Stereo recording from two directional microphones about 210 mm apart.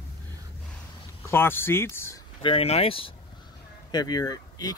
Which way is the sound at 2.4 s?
30° left (ahead or behind).